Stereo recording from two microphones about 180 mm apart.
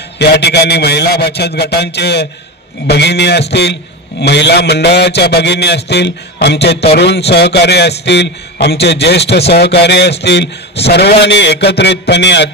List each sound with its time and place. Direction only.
0.2 s a man's voice: 70° left (ahead or behind)